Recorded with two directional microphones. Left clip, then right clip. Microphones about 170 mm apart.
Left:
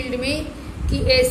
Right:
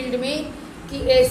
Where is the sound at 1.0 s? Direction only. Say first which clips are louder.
Right 1 dB; 30° left (ahead or behind).